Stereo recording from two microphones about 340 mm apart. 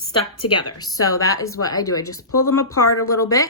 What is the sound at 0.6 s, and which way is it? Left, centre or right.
Speech, centre.